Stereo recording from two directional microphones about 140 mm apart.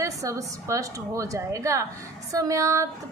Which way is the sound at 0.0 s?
25° right (ahead or behind).